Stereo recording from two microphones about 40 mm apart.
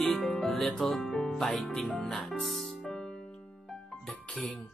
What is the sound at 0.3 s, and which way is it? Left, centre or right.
Music, centre.